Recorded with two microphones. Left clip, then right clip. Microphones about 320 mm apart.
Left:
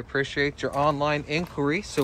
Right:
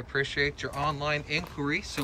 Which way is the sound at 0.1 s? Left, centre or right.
Centre.